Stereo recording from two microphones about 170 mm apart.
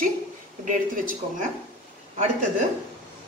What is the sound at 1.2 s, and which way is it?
Speech, 40° right (ahead or behind).